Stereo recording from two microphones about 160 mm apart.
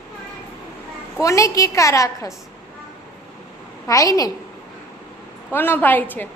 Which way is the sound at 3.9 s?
20° left (ahead or behind).